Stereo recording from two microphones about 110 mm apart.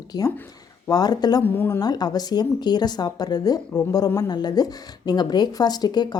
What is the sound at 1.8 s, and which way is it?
Speech, 40° left (ahead or behind).